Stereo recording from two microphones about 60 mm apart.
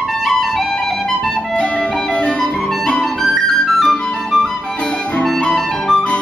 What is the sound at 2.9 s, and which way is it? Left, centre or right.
Clarinet, centre.